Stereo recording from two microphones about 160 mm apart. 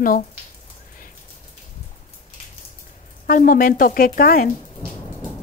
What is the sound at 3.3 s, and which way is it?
A woman's voice, 60° left (ahead or behind).